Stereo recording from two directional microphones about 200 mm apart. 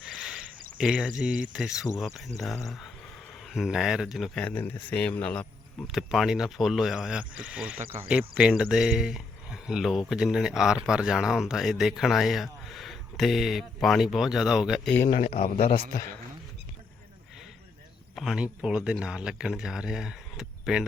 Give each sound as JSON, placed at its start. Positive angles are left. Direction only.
{"t": 0.2, "sound": "a sound", "side_deg": 0}
{"t": 0.8, "sound": "speech", "side_deg": -5}
{"t": 3.5, "sound": "speech", "side_deg": 0}
{"t": 14.9, "sound": "speech", "side_deg": 15}
{"t": 15.2, "sound": "a man's voice", "side_deg": 30}
{"t": 18.1, "sound": "speech", "side_deg": 0}